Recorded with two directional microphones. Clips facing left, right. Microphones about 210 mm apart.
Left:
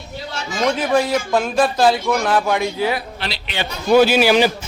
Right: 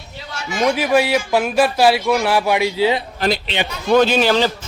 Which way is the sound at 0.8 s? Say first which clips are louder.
Right 1 dB; 5° right (ahead or behind).